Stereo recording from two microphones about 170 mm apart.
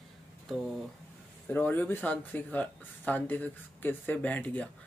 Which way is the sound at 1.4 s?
10° left (ahead or behind).